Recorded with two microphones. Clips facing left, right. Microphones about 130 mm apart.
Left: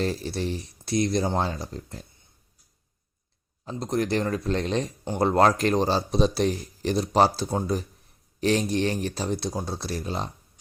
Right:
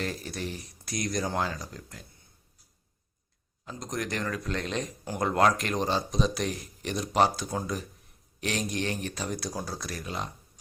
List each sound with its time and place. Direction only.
0.0 s speech: 30° left (ahead or behind)
3.7 s speech: 30° left (ahead or behind)